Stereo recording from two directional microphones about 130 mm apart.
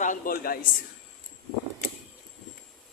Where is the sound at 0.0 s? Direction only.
85° left.